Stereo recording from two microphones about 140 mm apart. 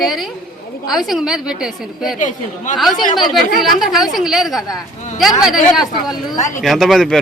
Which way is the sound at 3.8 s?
Centre (ahead or behind).